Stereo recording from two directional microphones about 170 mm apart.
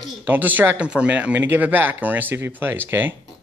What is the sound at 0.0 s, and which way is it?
Speech, 10° right (ahead or behind).